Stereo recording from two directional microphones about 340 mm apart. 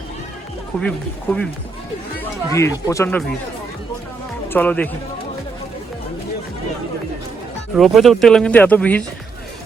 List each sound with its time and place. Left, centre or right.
0.8 s speech: centre
4.4 s speech: centre
7.8 s speech: centre